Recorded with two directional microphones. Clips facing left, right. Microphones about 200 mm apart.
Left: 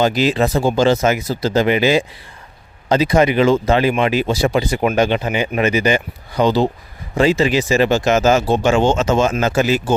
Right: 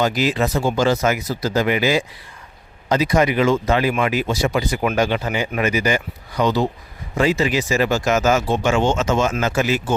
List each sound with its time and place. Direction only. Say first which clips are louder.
0.0 s speech: left 3 dB; 30° left (ahead or behind)